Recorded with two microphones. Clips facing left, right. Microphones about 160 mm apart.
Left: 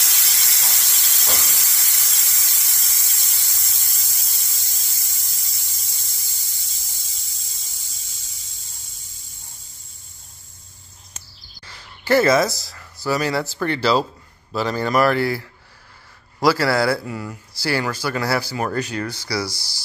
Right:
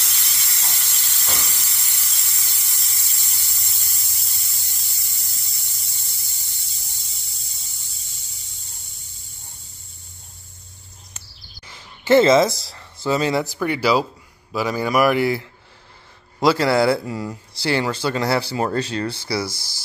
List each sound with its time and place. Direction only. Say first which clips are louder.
0.0 s steam: left 2 dB; 90° left
11.6 s speech: right 2 dB; 20° right (ahead or behind)